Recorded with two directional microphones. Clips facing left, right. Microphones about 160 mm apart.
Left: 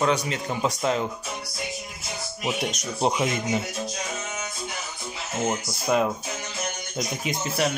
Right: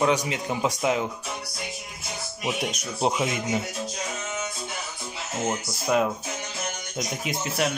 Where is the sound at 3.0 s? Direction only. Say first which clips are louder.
Left 1 dB; 5° right (ahead or behind).